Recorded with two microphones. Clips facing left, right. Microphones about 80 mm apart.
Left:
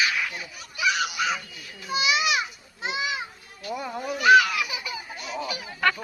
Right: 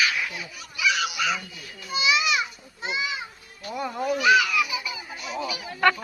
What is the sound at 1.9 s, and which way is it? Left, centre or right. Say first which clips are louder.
Children playing: even; left.